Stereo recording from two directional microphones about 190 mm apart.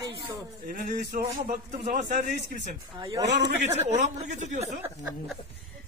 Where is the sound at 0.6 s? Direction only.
50° right (ahead or behind).